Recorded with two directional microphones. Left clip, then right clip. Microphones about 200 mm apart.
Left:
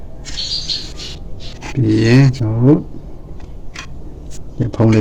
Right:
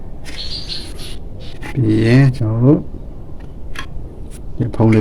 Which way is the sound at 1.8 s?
Centre (ahead or behind).